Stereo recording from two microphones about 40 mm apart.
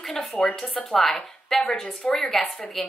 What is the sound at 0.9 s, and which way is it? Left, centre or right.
Speech, centre.